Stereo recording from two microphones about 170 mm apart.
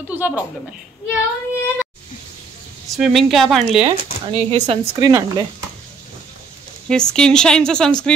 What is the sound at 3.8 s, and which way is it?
Speech, 35° right (ahead or behind).